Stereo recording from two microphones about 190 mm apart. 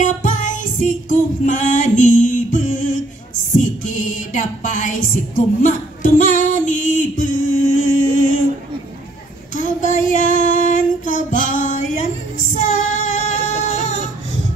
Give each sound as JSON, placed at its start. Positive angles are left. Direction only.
{"t": 0.0, "sound": "music", "side_deg": 40}
{"t": 9.6, "sound": "female singing", "side_deg": 40}
{"t": 12.5, "sound": "child singing", "side_deg": 40}